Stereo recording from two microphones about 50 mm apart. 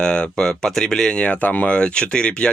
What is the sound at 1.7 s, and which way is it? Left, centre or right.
Speech, centre.